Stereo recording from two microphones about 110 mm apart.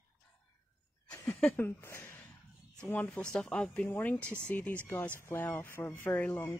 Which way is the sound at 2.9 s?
10° left (ahead or behind).